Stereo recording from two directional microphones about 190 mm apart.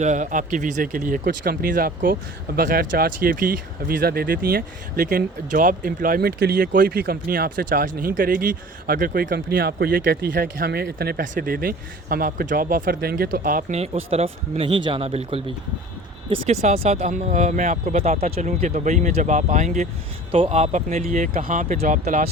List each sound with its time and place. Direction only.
0.0 s speech: 40° right (ahead or behind)